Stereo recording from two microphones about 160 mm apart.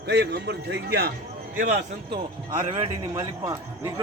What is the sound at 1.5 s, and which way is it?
Speech, 60° right (ahead or behind).